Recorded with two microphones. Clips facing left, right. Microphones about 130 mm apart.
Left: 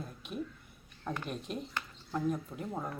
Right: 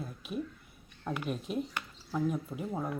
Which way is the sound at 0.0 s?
5° right (ahead or behind).